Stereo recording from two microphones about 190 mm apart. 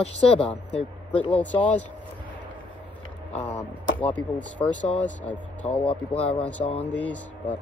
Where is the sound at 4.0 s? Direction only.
10° left (ahead or behind).